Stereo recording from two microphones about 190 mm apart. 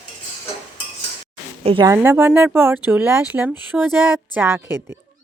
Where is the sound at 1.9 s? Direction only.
10° right (ahead or behind).